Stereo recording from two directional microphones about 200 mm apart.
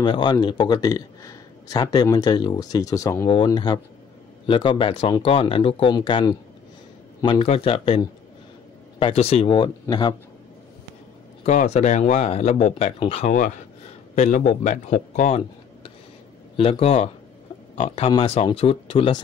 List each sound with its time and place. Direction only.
0.0 s speech: 20° left (ahead or behind)
11.4 s speech: 35° left (ahead or behind)